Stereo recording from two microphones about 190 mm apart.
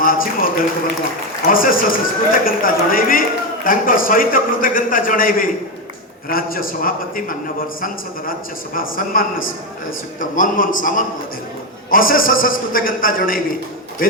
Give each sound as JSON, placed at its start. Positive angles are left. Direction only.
{"t": 0.0, "sound": "a man's voice", "side_deg": 50}